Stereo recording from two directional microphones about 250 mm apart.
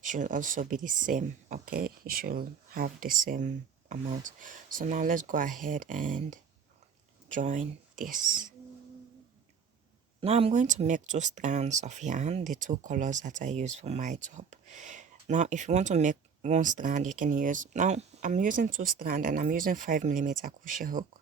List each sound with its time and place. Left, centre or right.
0.0 s speech: right
10.2 s speech: right